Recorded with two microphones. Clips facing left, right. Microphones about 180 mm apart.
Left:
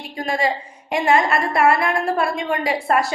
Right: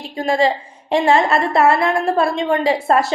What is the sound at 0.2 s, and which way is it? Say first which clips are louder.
A woman's voice: right 5 dB; 25° right (ahead or behind).